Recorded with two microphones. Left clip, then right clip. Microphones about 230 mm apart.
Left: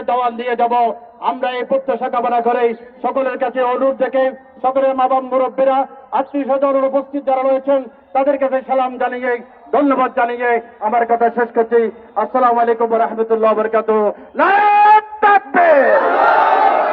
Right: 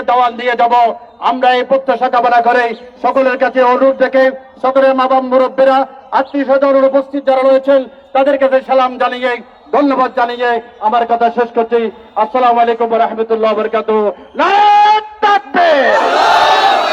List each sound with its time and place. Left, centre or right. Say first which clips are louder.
0.0 s a man's voice: right 6 dB; right; by 10.9 s centre
10.9 s a man's voice: right 2 dB; left
15.2 s music: right 1 dB; centre
15.5 s speech: right 2 dB; centre